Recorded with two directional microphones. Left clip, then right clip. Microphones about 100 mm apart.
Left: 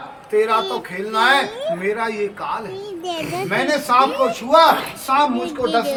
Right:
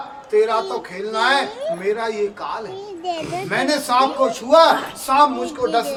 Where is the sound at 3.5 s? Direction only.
20° right (ahead or behind).